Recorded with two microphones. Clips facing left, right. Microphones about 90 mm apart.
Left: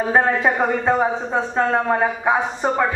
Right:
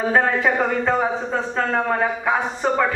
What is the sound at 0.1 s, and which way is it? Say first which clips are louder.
A man's voice: left 1 dB; 20° left (ahead or behind).